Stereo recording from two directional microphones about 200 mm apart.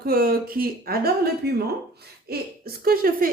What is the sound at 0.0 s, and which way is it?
A woman's voice, 50° right (ahead or behind).